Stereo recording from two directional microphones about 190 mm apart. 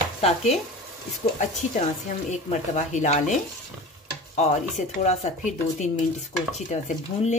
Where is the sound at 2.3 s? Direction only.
40° left (ahead or behind).